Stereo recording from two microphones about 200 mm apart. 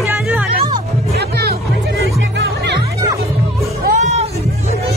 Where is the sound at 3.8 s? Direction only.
40° right (ahead or behind).